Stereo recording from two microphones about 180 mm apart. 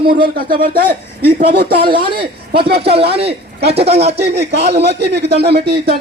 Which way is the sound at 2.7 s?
60° right (ahead or behind).